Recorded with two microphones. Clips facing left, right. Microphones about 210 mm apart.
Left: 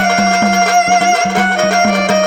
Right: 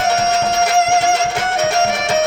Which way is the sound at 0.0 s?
70° left (ahead or behind).